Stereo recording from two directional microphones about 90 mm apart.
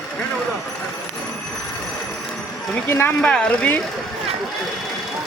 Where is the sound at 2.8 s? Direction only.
25° left (ahead or behind).